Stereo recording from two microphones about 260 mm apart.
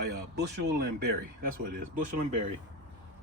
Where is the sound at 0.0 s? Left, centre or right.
Right.